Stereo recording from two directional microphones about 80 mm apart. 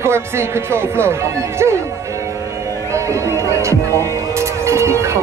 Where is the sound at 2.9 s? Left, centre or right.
Right.